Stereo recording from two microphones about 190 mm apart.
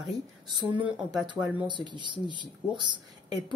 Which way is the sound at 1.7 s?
25° right (ahead or behind).